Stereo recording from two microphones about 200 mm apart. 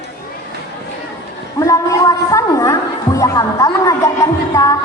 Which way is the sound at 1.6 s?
15° left (ahead or behind).